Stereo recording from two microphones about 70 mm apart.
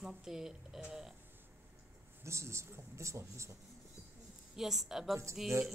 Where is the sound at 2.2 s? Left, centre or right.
Right.